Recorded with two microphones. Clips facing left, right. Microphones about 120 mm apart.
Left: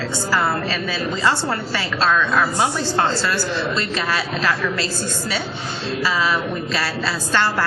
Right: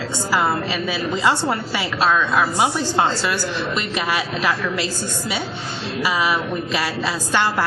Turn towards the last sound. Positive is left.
turn(degrees=-15)  # may be behind; listen again after turning